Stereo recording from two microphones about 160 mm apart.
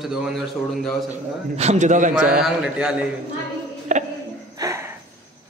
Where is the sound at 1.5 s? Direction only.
45° right (ahead or behind).